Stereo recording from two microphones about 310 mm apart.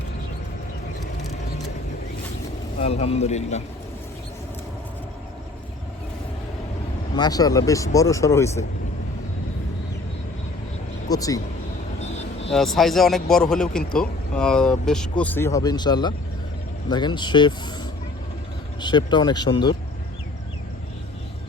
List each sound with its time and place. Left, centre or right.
2.7 s a man's voice: centre
7.2 s speech: centre
11.1 s speech: centre
12.5 s speech: centre
18.8 s speech: centre